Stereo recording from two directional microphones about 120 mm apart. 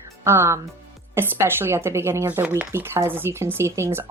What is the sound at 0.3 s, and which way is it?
Speech, 20° right (ahead or behind).